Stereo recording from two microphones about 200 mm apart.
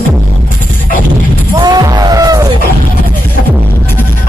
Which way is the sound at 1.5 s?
20° right (ahead or behind).